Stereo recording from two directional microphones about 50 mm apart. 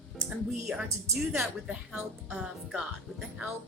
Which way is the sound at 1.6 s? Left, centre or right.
Centre.